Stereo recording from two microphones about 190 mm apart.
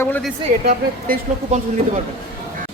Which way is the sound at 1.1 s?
35° right (ahead or behind).